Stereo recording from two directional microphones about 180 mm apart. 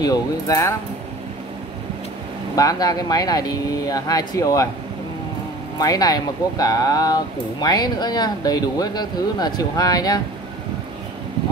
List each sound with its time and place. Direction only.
0.0 s speech: 20° left (ahead or behind)
2.5 s speech: 20° left (ahead or behind)
5.8 s speech: 20° left (ahead or behind)